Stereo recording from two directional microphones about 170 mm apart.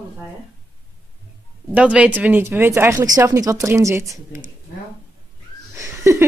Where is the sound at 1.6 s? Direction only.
5° right (ahead or behind).